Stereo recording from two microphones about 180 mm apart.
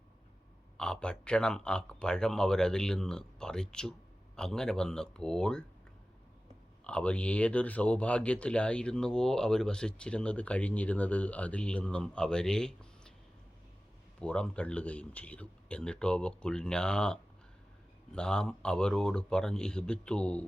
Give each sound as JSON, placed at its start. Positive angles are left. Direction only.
{"t": 0.8, "sound": "speech", "side_deg": 5}
{"t": 6.8, "sound": "speech", "side_deg": 5}
{"t": 14.2, "sound": "speech", "side_deg": 5}